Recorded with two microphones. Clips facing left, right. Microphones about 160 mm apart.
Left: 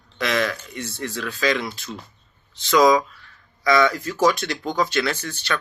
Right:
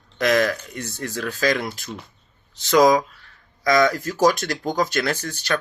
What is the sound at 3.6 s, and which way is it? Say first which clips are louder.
Speech: right 1 dB; 40° right (ahead or behind).